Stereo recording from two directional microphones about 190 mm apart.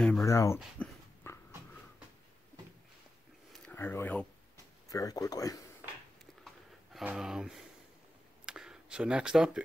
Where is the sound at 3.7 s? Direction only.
10° left (ahead or behind).